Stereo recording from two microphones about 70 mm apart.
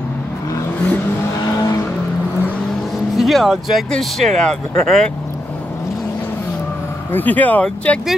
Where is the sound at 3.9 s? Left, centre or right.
Centre.